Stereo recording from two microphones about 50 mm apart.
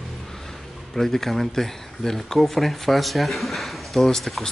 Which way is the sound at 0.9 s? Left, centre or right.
Centre.